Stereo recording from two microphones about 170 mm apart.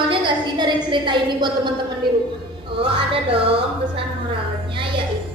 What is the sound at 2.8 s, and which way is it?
Speech, 35° right (ahead or behind).